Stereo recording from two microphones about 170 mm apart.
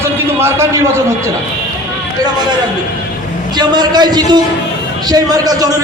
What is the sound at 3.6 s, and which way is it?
A man's voice, 25° right (ahead or behind).